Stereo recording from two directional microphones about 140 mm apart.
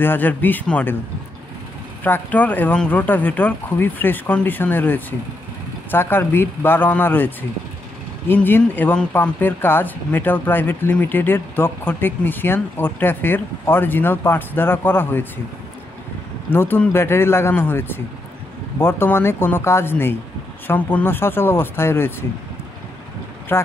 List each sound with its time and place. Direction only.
0.0 s speech: 15° left (ahead or behind)
2.0 s speech: 15° left (ahead or behind)
16.4 s speech: 15° left (ahead or behind)
23.5 s speech: 15° left (ahead or behind)